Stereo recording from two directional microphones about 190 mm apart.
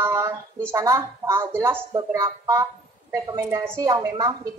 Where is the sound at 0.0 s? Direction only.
15° right (ahead or behind).